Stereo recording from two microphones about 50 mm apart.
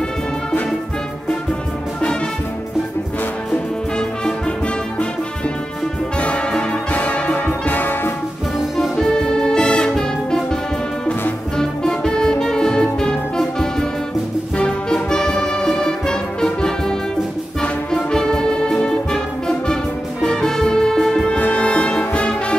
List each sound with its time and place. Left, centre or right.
6.1 s brass instrument: left
6.9 s music: left
8.9 s music: centre
11.5 s music: centre
14.9 s music: centre
21.3 s music: left